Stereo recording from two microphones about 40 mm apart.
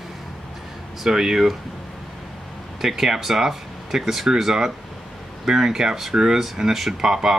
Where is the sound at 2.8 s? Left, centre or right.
Centre.